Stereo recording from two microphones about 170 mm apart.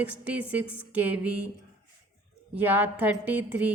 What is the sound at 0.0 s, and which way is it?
A woman's voice, 10° right (ahead or behind).